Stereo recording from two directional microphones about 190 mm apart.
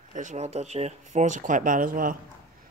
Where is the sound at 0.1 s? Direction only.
40° right (ahead or behind).